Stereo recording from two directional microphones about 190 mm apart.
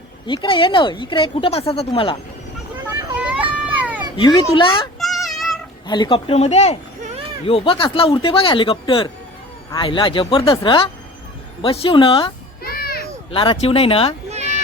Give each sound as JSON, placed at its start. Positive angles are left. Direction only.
{"t": 0.3, "sound": "speech", "side_deg": 25}
{"t": 3.2, "sound": "a sound", "side_deg": -10}
{"t": 4.2, "sound": "speech", "side_deg": 25}
{"t": 4.9, "sound": "child singing", "side_deg": 0}
{"t": 5.9, "sound": "speech", "side_deg": 25}
{"t": 12.6, "sound": "children playing", "side_deg": 50}
{"t": 13.3, "sound": "speech", "side_deg": 25}
{"t": 14.3, "sound": "a sound", "side_deg": -35}